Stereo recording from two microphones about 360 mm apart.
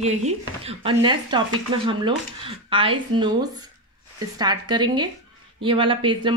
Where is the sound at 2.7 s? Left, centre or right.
Centre.